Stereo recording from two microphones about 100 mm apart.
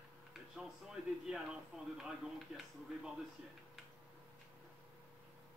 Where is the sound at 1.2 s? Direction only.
5° right (ahead or behind).